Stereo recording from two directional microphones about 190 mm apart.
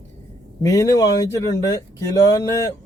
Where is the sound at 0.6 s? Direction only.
15° left (ahead or behind).